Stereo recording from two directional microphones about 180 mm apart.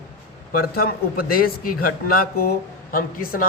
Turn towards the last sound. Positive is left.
turn(degrees=55)  # may be behind; listen again after turning